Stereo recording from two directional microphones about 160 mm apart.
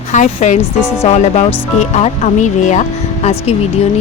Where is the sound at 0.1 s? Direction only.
50° left (ahead or behind).